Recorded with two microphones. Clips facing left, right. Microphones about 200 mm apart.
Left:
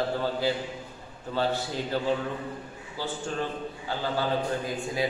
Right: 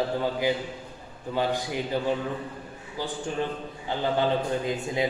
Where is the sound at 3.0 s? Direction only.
15° right (ahead or behind).